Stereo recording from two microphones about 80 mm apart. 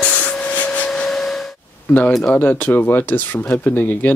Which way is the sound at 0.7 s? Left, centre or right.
Centre.